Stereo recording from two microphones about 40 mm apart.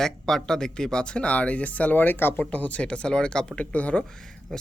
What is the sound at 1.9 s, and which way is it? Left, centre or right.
Speech, left.